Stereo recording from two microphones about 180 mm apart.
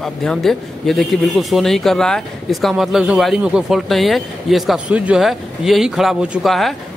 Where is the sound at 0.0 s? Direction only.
5° left (ahead or behind).